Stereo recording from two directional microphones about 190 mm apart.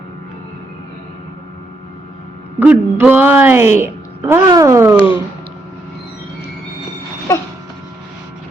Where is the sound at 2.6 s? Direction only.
10° right (ahead or behind).